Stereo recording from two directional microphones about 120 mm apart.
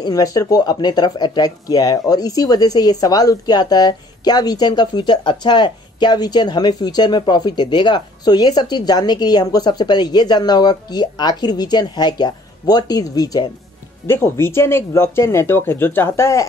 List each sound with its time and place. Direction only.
0.0 s speech: 30° left (ahead or behind)
14.0 s speech: 20° left (ahead or behind)